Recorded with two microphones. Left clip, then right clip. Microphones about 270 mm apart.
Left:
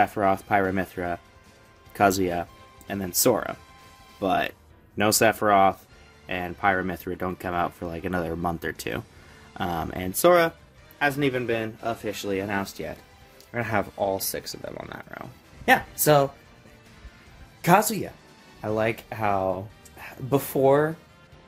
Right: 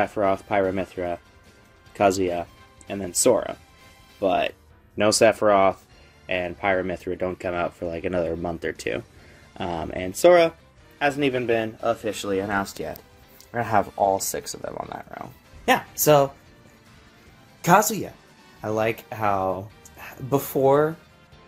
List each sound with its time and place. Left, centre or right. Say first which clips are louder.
0.0 s speech: even; centre
17.6 s speech: right 2 dB; centre